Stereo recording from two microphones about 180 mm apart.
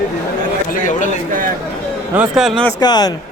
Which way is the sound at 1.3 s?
50° right (ahead or behind).